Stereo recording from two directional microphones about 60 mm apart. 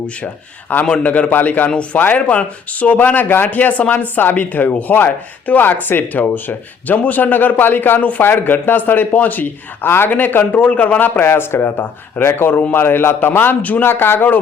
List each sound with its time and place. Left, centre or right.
0.7 s a man's voice: left
11.3 s speech: left